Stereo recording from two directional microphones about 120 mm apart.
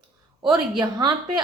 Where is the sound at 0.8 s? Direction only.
35° right (ahead or behind).